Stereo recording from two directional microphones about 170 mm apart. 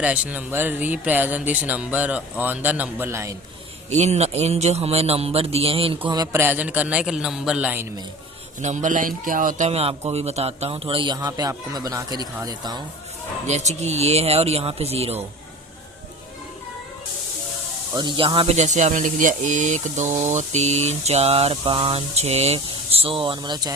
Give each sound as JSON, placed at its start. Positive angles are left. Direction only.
{"t": 0.0, "sound": "speech", "side_deg": -10}
{"t": 3.8, "sound": "speech", "side_deg": -40}
{"t": 6.1, "sound": "speech", "side_deg": -20}
{"t": 8.6, "sound": "speech", "side_deg": -45}
{"t": 9.6, "sound": "speech", "side_deg": -35}
{"t": 13.5, "sound": "speech", "side_deg": -40}
{"t": 17.9, "sound": "speech", "side_deg": -25}